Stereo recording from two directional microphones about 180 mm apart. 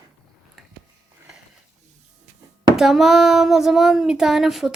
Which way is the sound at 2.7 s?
Centre (ahead or behind).